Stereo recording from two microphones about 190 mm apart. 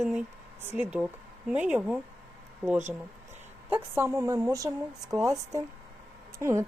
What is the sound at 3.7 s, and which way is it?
Speech, 15° right (ahead or behind).